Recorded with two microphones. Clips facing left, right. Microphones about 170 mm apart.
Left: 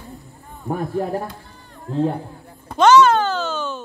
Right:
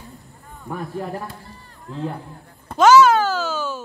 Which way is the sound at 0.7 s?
40° left (ahead or behind).